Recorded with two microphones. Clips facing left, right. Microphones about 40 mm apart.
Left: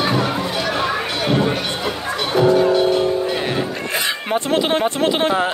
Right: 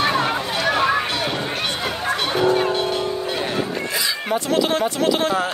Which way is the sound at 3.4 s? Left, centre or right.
Left.